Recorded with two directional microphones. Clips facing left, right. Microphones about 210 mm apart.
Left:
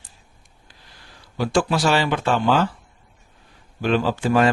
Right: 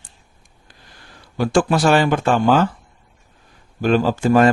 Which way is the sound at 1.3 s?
50° right (ahead or behind).